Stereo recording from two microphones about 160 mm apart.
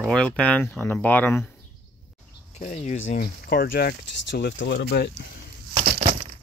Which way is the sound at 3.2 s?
70° left (ahead or behind).